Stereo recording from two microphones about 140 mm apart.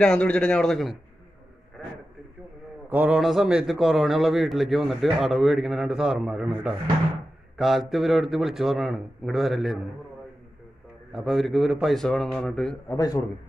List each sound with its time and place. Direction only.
0.0 s speech: 10° left (ahead or behind)
2.9 s a man's voice: 10° right (ahead or behind)
11.1 s a man's voice: centre (ahead or behind)
12.8 s a man's voice: 25° left (ahead or behind)